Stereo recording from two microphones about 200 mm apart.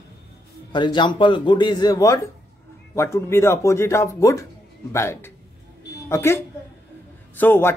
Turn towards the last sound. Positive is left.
turn(degrees=10)  # may be behind; listen again after turning